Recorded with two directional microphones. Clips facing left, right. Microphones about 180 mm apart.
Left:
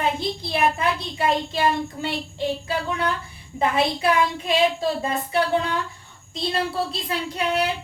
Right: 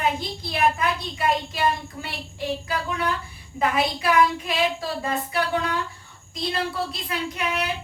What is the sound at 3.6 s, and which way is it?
A woman's voice, 25° left (ahead or behind).